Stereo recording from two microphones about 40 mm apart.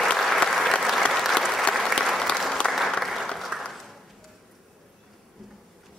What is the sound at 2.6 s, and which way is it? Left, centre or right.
Applause, left.